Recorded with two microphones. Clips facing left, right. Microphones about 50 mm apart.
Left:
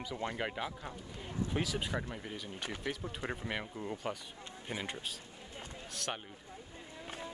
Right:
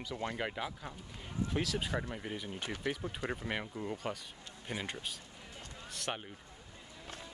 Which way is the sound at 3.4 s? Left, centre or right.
Centre.